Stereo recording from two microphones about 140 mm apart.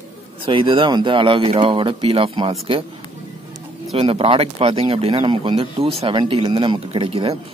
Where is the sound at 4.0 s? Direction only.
45° right (ahead or behind).